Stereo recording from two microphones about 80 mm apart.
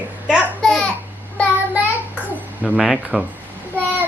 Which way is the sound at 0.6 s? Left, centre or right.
Centre.